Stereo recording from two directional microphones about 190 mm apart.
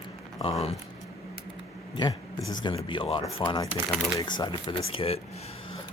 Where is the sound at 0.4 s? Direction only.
30° left (ahead or behind).